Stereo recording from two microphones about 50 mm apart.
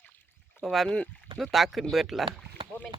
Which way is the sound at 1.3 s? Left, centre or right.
Centre.